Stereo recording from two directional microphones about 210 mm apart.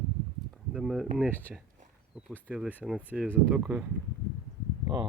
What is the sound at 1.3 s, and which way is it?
Speech, 10° left (ahead or behind).